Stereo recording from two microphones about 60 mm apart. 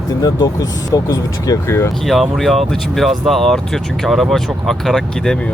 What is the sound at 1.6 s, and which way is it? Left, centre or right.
Speech, left.